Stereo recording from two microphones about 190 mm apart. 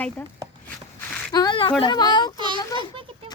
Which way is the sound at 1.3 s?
25° left (ahead or behind).